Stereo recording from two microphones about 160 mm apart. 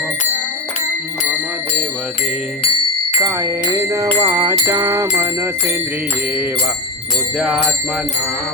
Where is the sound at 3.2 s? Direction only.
15° right (ahead or behind).